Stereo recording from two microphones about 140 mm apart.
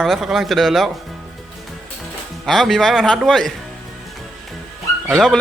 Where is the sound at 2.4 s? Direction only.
Centre (ahead or behind).